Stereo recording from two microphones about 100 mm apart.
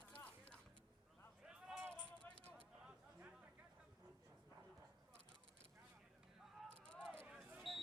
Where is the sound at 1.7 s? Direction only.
10° right (ahead or behind).